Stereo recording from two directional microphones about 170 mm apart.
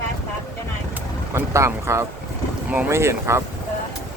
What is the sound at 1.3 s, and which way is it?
Speech, 15° right (ahead or behind).